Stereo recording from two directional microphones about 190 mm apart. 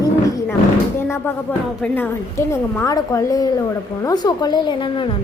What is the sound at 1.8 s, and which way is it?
A woman's voice, 10° left (ahead or behind).